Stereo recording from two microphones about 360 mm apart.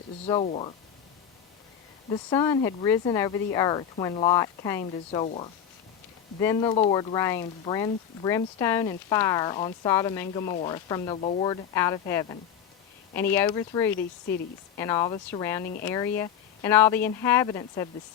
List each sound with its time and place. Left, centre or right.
0.3 s speech: centre
2.0 s speech: centre